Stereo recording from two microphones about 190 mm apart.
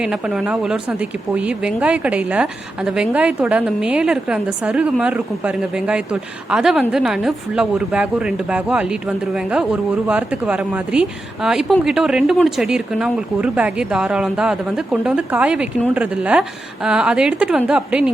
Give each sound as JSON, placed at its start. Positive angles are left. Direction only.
{"t": 0.0, "sound": "speech", "side_deg": -5}